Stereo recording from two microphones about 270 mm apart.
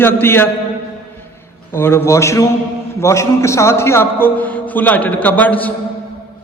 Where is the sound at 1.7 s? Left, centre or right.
Centre.